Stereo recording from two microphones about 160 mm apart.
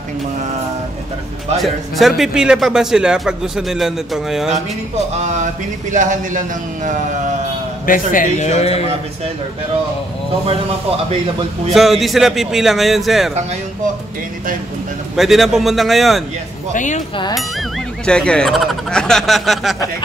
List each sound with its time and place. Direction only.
1.6 s a man's voice: centre (ahead or behind)
5.1 s speech: 50° right (ahead or behind)
7.8 s a man's voice: 60° left (ahead or behind); by 8.8 s 40° left (ahead or behind)
11.7 s a man's voice: centre (ahead or behind)
15.1 s a man's voice: centre (ahead or behind)
16.7 s a man's voice: 50° left (ahead or behind)
18.0 s a man's voice: 5° left (ahead or behind)